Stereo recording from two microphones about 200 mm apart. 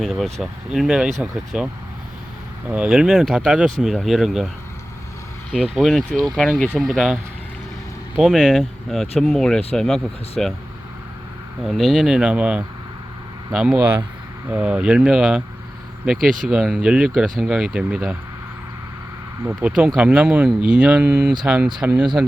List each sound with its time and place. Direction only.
0.0 s speech: centre (ahead or behind)
5.5 s speech: centre (ahead or behind)
11.6 s speech: centre (ahead or behind)
19.5 s speech: 5° right (ahead or behind)